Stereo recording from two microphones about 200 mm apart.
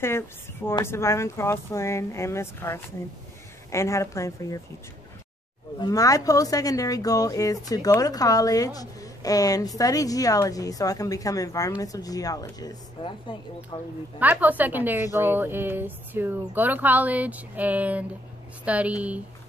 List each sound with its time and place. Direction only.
0.7 s speech: 10° left (ahead or behind)
5.8 s a woman's voice: 20° left (ahead or behind)
14.2 s speech: 10° right (ahead or behind)